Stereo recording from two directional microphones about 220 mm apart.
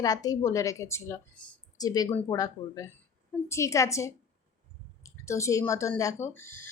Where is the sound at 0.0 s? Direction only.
15° left (ahead or behind).